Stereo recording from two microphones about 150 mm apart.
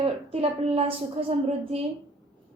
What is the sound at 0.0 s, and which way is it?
A woman's voice, 40° right (ahead or behind).